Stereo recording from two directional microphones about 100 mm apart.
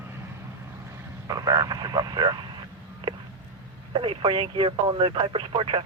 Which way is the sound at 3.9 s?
60° right (ahead or behind).